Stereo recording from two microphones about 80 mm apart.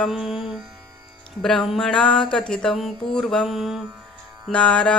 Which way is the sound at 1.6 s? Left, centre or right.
Centre.